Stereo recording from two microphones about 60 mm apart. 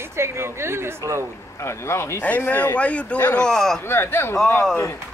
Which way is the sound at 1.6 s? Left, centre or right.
Left.